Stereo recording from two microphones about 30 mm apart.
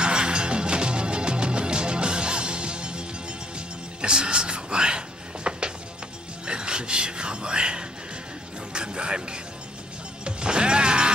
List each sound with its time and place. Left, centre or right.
0.0 s music: right